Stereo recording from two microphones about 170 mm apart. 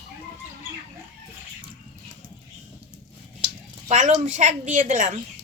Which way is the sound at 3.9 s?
45° right (ahead or behind).